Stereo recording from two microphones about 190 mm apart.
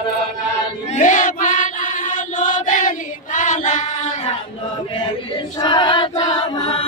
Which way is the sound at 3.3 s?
40° left (ahead or behind).